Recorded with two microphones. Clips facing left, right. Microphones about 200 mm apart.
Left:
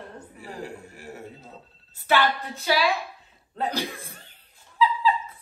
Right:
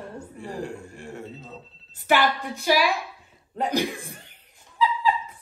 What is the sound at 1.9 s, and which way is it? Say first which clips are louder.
Speech: right 1 dB; 15° right (ahead or behind).